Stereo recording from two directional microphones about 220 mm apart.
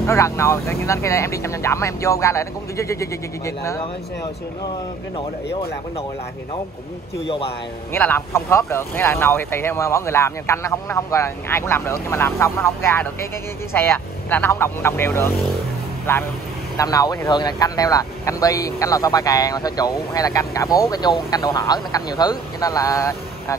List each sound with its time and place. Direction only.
0.0 s speech: 15° left (ahead or behind)
5.1 s speech: 25° left (ahead or behind)
7.9 s speech: 10° left (ahead or behind)